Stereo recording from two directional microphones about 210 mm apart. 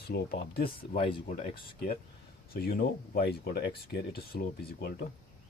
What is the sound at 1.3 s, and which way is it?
Speech, 40° left (ahead or behind).